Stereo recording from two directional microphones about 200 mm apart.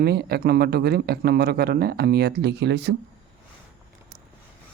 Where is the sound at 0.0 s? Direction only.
55° right (ahead or behind).